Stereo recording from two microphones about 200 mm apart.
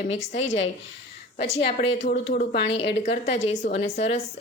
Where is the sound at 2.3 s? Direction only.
55° left (ahead or behind).